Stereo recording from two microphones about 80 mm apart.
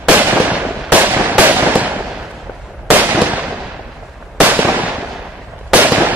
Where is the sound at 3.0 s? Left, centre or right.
Right.